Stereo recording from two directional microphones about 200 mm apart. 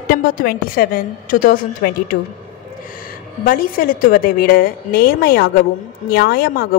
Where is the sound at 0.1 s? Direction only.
45° left (ahead or behind).